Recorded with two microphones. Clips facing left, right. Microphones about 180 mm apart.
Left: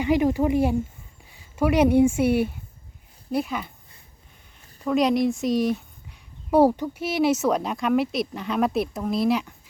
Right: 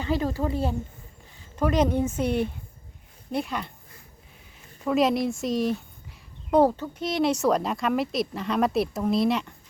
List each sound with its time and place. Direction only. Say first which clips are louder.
0.0 s speech: left 6 dB; 15° left (ahead or behind)